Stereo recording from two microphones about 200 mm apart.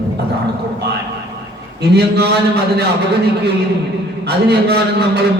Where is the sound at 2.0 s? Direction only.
55° right (ahead or behind).